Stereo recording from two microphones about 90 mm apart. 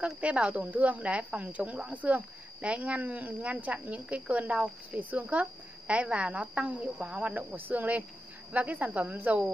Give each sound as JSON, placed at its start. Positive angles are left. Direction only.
{"t": 0.0, "sound": "speech", "side_deg": -10}